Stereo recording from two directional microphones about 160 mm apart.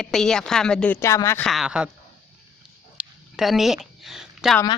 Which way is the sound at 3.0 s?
Centre (ahead or behind).